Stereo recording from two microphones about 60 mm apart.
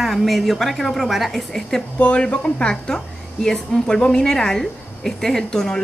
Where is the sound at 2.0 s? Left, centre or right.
Left.